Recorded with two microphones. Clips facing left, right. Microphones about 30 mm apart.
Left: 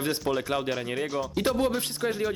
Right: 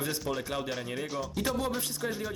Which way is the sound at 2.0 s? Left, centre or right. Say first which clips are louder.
Left 5 dB; left.